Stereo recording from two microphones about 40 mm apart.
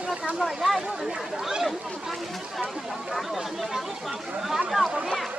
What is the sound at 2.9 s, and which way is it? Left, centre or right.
Speech, centre.